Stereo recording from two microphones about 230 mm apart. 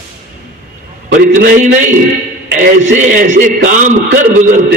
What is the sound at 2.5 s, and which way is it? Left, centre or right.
A man's voice, right.